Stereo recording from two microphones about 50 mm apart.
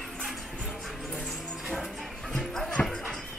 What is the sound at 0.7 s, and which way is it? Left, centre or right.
Vehicle, centre.